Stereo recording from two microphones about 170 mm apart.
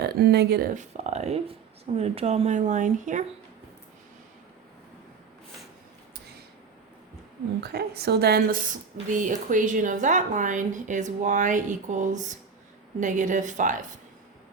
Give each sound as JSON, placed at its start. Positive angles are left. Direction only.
{"t": 0.0, "sound": "a woman's voice", "side_deg": -75}
{"t": 7.6, "sound": "a woman's voice", "side_deg": -70}